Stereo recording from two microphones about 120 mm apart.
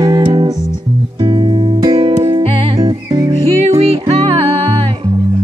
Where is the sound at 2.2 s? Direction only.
50° right (ahead or behind).